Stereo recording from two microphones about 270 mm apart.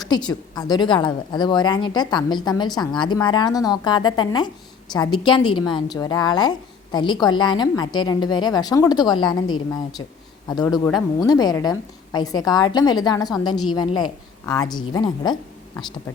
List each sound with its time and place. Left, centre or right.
0.0 s a woman's voice: centre
10.5 s a woman's voice: centre